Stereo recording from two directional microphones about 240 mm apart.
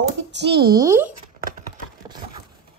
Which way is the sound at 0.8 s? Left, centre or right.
Centre.